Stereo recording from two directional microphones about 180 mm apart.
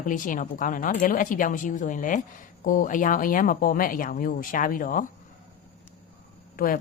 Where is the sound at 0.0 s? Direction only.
45° left (ahead or behind).